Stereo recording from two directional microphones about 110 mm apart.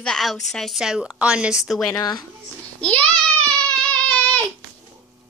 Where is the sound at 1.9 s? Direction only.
35° left (ahead or behind).